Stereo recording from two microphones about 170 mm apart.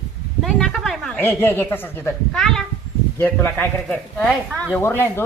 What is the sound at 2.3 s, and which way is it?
Speech, centre (ahead or behind).